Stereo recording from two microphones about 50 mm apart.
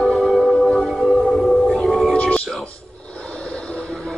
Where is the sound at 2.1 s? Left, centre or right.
Left.